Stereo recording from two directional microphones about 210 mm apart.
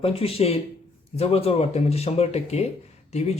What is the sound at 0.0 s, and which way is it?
Speech, 30° left (ahead or behind).